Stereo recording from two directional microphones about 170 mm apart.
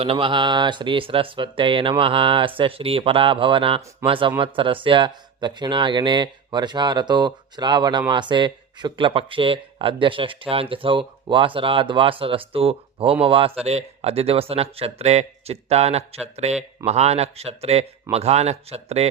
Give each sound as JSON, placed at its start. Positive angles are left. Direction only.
{"t": 0.0, "sound": "speech", "side_deg": -30}